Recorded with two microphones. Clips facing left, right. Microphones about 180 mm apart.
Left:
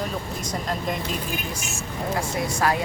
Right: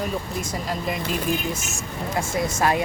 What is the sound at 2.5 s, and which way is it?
Speech, 20° right (ahead or behind).